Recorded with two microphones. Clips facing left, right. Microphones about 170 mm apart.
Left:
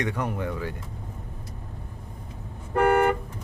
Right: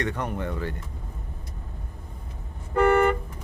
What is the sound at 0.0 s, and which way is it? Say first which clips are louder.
Speech: left 1 dB; 10° left (ahead or behind).